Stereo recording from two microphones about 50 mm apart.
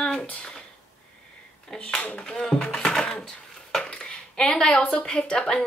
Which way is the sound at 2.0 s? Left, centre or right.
Left.